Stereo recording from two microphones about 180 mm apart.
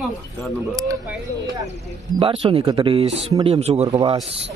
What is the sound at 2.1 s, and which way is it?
Speech, 30° right (ahead or behind).